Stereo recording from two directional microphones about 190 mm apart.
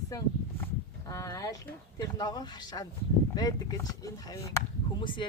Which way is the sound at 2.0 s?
20° left (ahead or behind).